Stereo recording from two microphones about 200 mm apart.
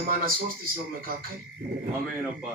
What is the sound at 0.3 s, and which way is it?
Speech, 45° right (ahead or behind).